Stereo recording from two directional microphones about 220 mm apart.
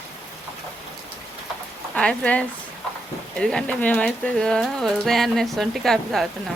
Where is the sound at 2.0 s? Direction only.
5° left (ahead or behind).